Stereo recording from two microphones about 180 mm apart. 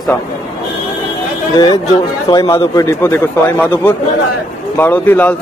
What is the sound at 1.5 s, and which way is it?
Speech, 20° left (ahead or behind).